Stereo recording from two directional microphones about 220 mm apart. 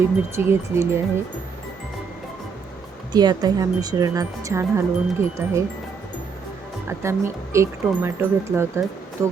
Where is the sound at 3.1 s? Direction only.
20° right (ahead or behind).